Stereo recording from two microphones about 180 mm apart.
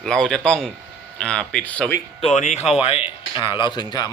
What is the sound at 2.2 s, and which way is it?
Speech, 40° left (ahead or behind).